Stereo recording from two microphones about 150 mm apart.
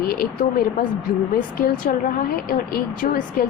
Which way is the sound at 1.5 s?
75° left (ahead or behind).